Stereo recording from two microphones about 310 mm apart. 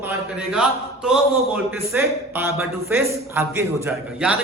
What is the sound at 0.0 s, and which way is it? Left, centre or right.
A man's voice, centre.